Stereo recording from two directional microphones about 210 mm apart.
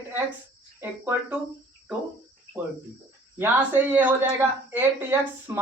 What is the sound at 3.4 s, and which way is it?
Speech, 10° right (ahead or behind).